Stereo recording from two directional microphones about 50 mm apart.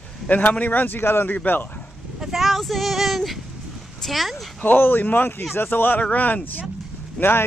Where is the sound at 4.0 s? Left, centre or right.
Centre.